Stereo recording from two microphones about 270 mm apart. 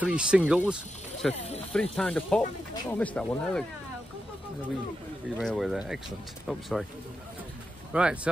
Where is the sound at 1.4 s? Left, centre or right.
Left.